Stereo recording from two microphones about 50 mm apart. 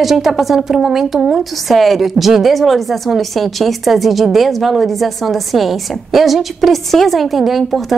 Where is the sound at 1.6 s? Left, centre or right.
Centre.